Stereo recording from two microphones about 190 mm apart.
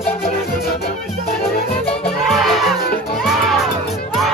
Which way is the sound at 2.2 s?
Centre (ahead or behind).